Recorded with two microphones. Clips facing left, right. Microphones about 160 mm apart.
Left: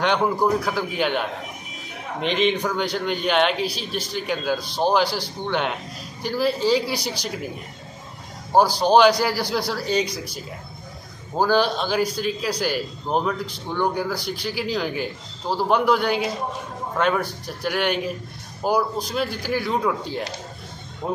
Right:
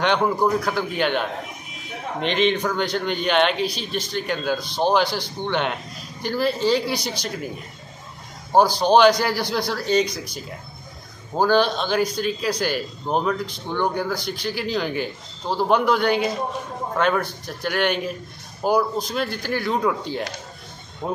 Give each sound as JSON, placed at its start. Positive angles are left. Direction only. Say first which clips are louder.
{"t": 0.0, "sound": "a man's voice", "louder": "right 1 dB", "side_deg": 5}
{"t": 8.5, "sound": "a man's voice", "louder": "right 1 dB", "side_deg": 5}
{"t": 11.3, "sound": "a man's voice", "louder": "right 1 dB", "side_deg": 5}